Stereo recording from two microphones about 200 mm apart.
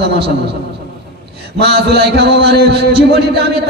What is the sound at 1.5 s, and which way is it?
A man's voice, 55° right (ahead or behind).